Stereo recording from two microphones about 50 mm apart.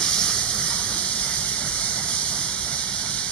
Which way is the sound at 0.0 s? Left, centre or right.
Centre.